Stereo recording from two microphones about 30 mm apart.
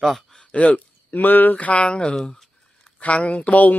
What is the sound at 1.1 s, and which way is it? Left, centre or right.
Speech, left.